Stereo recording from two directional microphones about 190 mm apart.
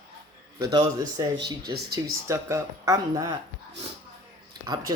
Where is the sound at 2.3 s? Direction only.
15° right (ahead or behind).